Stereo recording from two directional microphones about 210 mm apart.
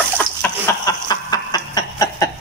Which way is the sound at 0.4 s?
15° left (ahead or behind).